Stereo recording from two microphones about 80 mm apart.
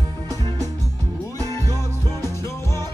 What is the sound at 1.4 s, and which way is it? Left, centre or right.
Music, left.